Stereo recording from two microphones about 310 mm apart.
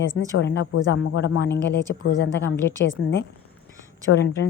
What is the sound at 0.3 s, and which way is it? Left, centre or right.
A woman's voice, left.